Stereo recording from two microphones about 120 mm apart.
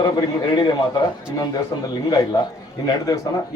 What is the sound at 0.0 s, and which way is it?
Speech, 40° left (ahead or behind).